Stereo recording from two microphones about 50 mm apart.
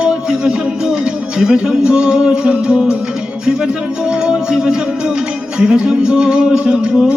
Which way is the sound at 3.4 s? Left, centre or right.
Centre.